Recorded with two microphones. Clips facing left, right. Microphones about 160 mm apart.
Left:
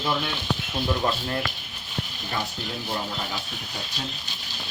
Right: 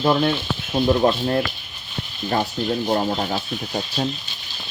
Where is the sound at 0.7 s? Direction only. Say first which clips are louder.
Right 10 dB; 35° right (ahead or behind).